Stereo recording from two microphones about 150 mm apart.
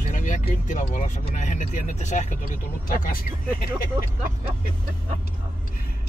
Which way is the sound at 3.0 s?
70° left (ahead or behind).